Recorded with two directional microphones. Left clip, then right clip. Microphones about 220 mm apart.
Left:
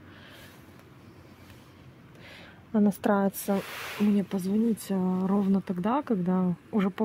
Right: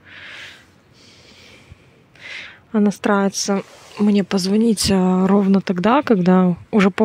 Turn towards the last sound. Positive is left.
turn(degrees=-35)  # may be behind; listen again after turning